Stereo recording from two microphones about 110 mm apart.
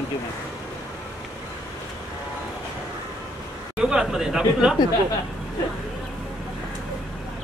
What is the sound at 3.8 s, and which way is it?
Speech, 5° right (ahead or behind).